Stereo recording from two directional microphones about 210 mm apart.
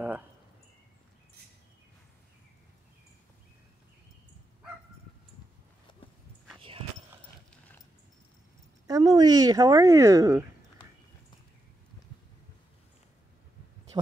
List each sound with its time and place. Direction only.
8.8 s speech: 15° right (ahead or behind)